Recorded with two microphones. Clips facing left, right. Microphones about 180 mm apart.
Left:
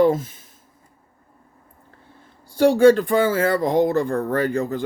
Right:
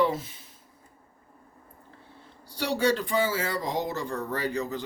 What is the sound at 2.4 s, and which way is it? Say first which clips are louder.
Speech: left 13 dB; 50° left (ahead or behind).